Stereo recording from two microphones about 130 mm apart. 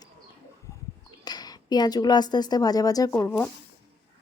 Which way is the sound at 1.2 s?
30° left (ahead or behind).